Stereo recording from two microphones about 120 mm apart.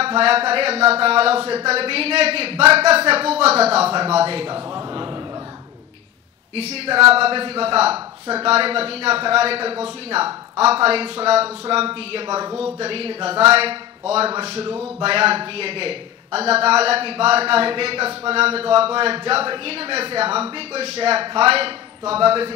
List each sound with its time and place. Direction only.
0.0 s a man's voice: 55° right (ahead or behind)
6.5 s a man's voice: 55° right (ahead or behind)
12.3 s speech: 30° right (ahead or behind)
12.7 s a man's voice: 55° right (ahead or behind)